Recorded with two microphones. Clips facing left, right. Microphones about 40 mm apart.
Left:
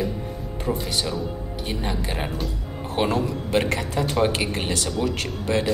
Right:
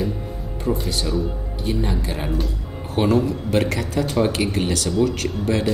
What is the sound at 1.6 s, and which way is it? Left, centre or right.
Speech, left.